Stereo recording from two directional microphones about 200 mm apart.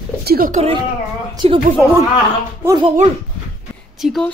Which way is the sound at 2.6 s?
20° right (ahead or behind).